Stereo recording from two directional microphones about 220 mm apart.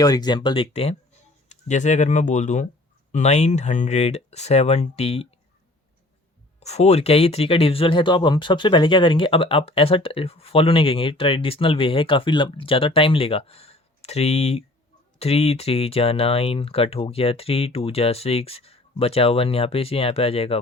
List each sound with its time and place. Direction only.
0.0 s speech: 15° left (ahead or behind)
6.6 s speech: 30° left (ahead or behind)